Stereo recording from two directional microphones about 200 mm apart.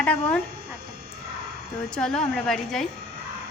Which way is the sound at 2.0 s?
5° left (ahead or behind).